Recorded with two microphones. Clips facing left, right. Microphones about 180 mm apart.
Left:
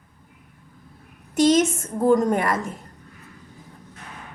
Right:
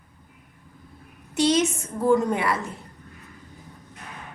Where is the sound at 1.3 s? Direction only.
45° left (ahead or behind).